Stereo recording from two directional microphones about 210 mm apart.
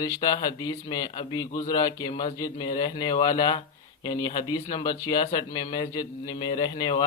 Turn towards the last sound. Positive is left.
turn(degrees=20)  # may be behind; listen again after turning